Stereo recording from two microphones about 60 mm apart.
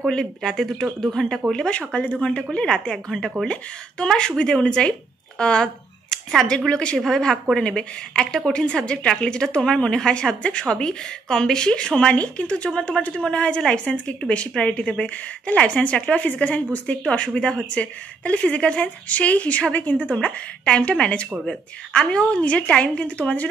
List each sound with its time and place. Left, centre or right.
0.0 s a woman's voice: centre
5.4 s a sound: centre
6.4 s a woman's voice: centre